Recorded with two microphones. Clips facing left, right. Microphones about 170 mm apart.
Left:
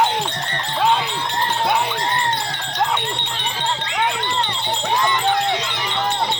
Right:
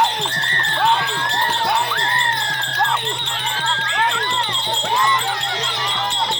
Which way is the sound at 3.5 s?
15° left (ahead or behind).